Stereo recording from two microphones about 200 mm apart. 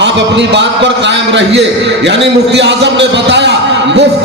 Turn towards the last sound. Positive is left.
turn(degrees=-60)  # may be behind; listen again after turning